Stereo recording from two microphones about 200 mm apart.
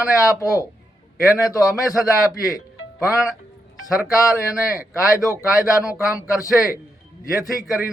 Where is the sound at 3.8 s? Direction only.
Centre (ahead or behind).